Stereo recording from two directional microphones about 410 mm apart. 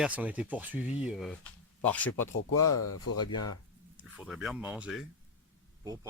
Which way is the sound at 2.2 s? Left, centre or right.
Left.